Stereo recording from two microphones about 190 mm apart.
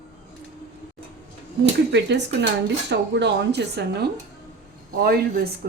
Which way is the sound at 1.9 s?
65° right (ahead or behind).